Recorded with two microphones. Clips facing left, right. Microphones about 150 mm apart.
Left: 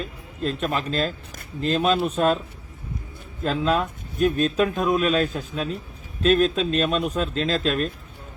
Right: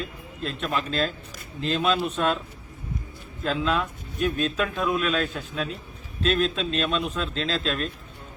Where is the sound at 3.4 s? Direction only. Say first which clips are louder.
Left 3 dB; 40° left (ahead or behind).